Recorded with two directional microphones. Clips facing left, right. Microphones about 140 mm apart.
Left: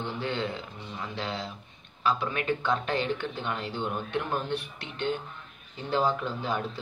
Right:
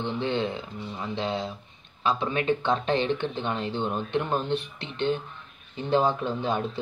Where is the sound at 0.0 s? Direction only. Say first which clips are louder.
Right 4 dB; 20° right (ahead or behind).